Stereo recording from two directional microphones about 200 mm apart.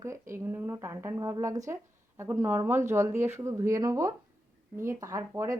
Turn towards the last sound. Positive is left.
turn(degrees=-15)  # may be behind; listen again after turning